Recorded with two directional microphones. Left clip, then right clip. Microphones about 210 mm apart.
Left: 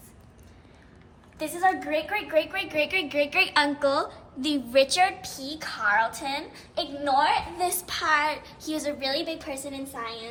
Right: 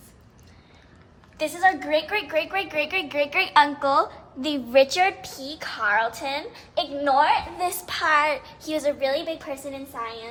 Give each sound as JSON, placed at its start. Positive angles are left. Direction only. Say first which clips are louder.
{"t": 1.4, "sound": "a woman's voice", "louder": "right 3 dB", "side_deg": -30}
{"t": 7.0, "sound": "a woman's voice", "louder": "right 3 dB", "side_deg": -20}